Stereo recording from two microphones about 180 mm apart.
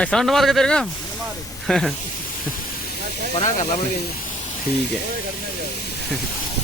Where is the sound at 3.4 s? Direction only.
40° left (ahead or behind).